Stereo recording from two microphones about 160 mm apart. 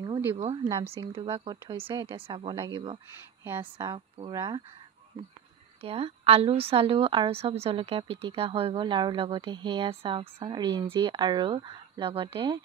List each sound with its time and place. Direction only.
0.7 s speech: 20° right (ahead or behind)
1.0 s a woman's voice: 35° right (ahead or behind)
3.4 s speech: 15° right (ahead or behind)
3.7 s speech: 30° right (ahead or behind)
5.8 s a woman's voice: 35° right (ahead or behind)